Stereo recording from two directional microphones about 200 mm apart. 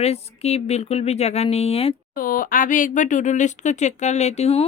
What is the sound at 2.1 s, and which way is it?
Speech, 45° left (ahead or behind).